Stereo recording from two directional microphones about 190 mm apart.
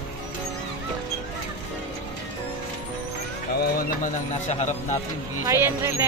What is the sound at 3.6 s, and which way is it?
Speech, 40° left (ahead or behind).